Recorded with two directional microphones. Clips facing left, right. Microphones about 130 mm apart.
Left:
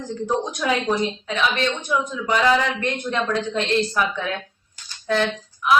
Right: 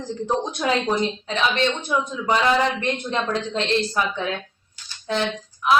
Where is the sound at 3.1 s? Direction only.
25° right (ahead or behind).